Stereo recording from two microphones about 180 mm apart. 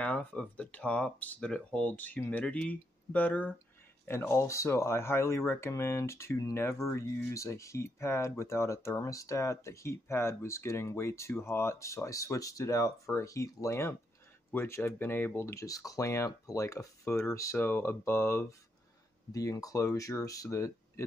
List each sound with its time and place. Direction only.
0.0 s speech: 5° left (ahead or behind)